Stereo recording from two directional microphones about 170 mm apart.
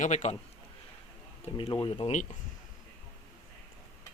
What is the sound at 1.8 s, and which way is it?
Speech, 30° left (ahead or behind).